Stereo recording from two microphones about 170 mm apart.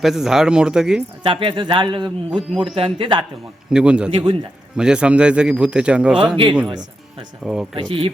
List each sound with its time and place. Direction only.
0.0 s speech: centre (ahead or behind)
1.2 s a man's voice: 30° right (ahead or behind)
2.3 s speech: centre (ahead or behind)
2.6 s speech: 30° right (ahead or behind)
3.7 s speech: 5° right (ahead or behind)
4.1 s speech: 30° right (ahead or behind)
4.8 s speech: 5° right (ahead or behind)
6.3 s speech: 30° right (ahead or behind)
7.4 s speech: 5° right (ahead or behind)
7.8 s a man's voice: 30° right (ahead or behind)